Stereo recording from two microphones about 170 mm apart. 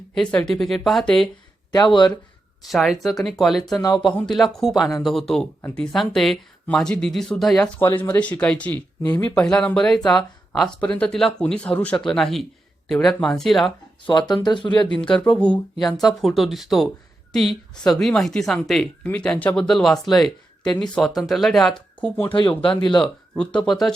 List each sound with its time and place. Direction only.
0.1 s speech: 5° left (ahead or behind)
1.7 s speech: 25° left (ahead or behind)
2.6 s speech: centre (ahead or behind)
3.8 s speech: 20° left (ahead or behind)
4.0 s speech: centre (ahead or behind)
7.8 s speech: 10° left (ahead or behind)
14.1 s speech: 25° left (ahead or behind)
14.8 s speech: 5° left (ahead or behind)
22.3 s speech: 30° left (ahead or behind)
23.0 s speech: 5° left (ahead or behind)